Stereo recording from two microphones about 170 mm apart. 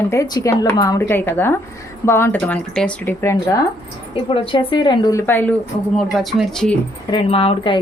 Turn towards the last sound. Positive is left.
turn(degrees=35)  # may be behind; listen again after turning